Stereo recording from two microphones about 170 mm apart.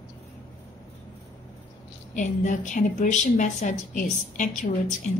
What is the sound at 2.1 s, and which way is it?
A woman's voice, 45° left (ahead or behind).